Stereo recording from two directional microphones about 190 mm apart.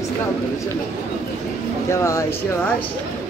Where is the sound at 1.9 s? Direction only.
15° left (ahead or behind).